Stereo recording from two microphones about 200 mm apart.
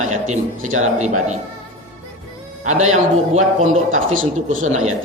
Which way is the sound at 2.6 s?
35° right (ahead or behind).